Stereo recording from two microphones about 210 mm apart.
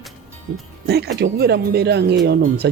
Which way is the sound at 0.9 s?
50° right (ahead or behind).